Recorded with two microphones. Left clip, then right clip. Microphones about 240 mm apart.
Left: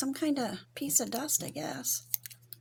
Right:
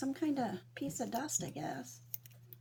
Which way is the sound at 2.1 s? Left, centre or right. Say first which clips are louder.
Left 14 dB; left.